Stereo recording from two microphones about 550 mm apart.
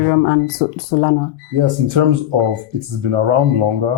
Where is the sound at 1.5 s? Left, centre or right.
Right.